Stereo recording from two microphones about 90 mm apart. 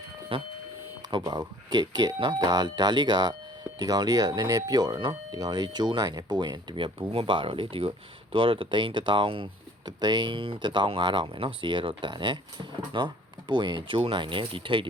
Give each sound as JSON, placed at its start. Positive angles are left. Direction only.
{"t": 0.3, "sound": "speech", "side_deg": -90}
{"t": 1.1, "sound": "speech", "side_deg": -50}
{"t": 7.1, "sound": "speech", "side_deg": -80}
{"t": 9.8, "sound": "speech", "side_deg": -50}
{"t": 10.3, "sound": "speech", "side_deg": -75}